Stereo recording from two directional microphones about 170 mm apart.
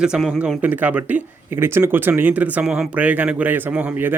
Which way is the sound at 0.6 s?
10° right (ahead or behind).